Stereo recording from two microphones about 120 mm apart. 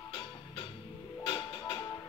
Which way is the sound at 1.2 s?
45° left (ahead or behind).